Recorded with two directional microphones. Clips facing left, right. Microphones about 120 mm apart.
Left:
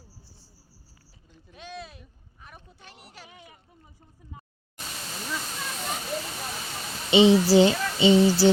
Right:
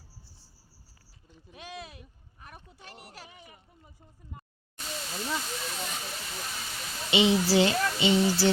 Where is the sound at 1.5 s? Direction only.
5° right (ahead or behind).